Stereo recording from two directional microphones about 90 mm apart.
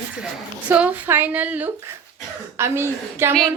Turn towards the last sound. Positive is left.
turn(degrees=-25)  # may be behind; listen again after turning